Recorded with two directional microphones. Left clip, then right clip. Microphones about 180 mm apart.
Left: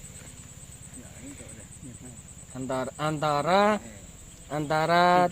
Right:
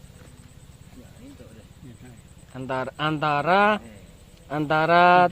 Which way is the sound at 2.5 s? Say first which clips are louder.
Right 2 dB; 30° right (ahead or behind).